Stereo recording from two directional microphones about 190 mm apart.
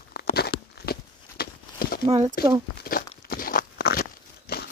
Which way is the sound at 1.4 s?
55° left (ahead or behind).